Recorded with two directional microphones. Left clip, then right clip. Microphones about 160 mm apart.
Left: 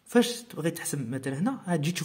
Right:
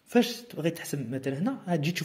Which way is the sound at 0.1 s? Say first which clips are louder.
Left 1 dB; 10° left (ahead or behind).